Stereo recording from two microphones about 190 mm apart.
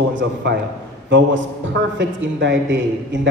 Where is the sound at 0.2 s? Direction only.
65° right (ahead or behind).